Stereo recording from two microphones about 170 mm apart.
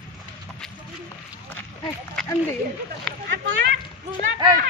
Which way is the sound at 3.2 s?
90° right.